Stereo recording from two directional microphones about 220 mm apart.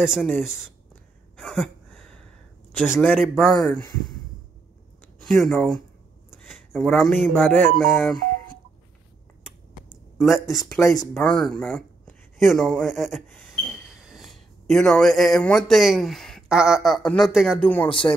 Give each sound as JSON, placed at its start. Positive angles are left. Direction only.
{"t": 0.0, "sound": "speech", "side_deg": 0}
{"t": 1.3, "sound": "a sound", "side_deg": 5}
{"t": 2.8, "sound": "speech", "side_deg": -5}
{"t": 5.2, "sound": "speech", "side_deg": 0}
{"t": 10.4, "sound": "speech", "side_deg": 0}
{"t": 17.8, "sound": "speech", "side_deg": 25}